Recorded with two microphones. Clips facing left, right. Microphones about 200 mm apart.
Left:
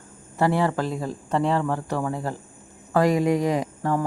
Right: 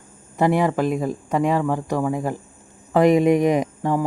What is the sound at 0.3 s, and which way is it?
Speech, 15° right (ahead or behind).